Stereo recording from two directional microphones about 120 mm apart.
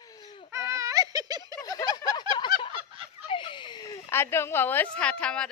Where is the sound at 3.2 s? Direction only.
45° left (ahead or behind).